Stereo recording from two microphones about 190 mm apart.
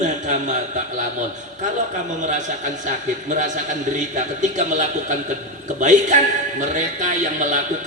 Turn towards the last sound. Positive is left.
turn(degrees=-40)  # may be behind; listen again after turning